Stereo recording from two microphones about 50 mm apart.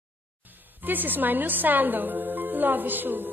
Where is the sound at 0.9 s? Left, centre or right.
Right.